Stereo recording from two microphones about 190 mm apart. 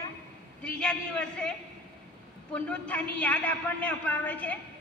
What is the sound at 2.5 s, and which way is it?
A man's voice, 5° left (ahead or behind).